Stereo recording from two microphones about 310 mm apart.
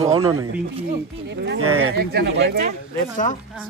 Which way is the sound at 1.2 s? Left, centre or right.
Right.